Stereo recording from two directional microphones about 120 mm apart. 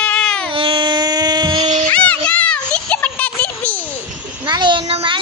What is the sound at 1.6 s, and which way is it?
Music, 90° right.